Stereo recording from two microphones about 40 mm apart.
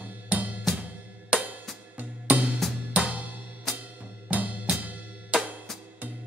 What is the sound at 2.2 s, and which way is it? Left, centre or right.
Drum kit, right.